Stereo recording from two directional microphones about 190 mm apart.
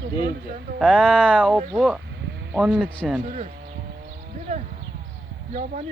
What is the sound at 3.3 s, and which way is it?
Speech, 40° right (ahead or behind).